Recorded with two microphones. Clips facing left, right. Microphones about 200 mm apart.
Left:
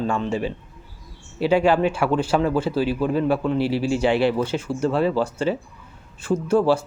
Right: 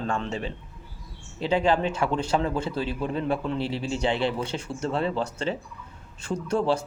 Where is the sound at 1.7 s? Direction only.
10° left (ahead or behind).